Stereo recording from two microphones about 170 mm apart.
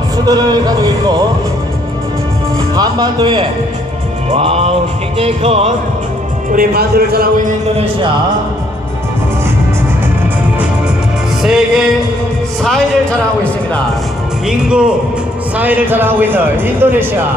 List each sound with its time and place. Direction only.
0.2 s speech: 25° right (ahead or behind)
2.7 s speech: 25° right (ahead or behind)
4.3 s music: 35° right (ahead or behind)
6.5 s a man's voice: 60° right (ahead or behind)
11.4 s music: centre (ahead or behind)
14.5 s speech: 5° right (ahead or behind)